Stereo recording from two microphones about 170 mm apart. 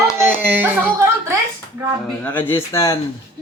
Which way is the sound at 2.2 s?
10° left (ahead or behind).